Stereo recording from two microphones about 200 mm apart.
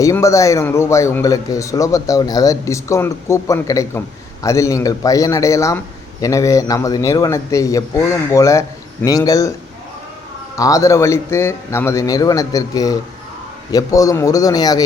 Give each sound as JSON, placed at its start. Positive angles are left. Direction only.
{"t": 0.0, "sound": "a man's voice", "side_deg": 15}
{"t": 10.5, "sound": "a man's voice", "side_deg": 15}